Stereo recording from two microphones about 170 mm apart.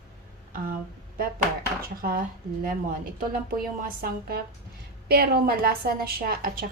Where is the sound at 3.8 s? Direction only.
60° right (ahead or behind).